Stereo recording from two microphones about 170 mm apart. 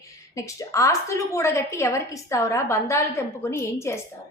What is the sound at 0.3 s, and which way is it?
A woman's voice, 20° left (ahead or behind).